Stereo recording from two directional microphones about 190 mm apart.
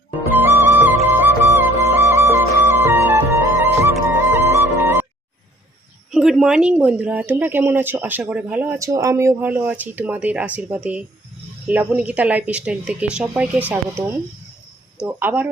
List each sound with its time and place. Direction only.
0.3 s music: 10° right (ahead or behind)
6.1 s speech: 5° right (ahead or behind)